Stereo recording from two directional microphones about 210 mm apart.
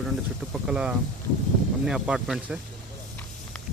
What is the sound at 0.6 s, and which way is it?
Speech, 5° right (ahead or behind).